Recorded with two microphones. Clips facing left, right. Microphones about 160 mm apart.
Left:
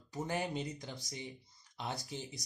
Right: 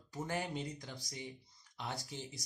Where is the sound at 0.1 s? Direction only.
20° left (ahead or behind).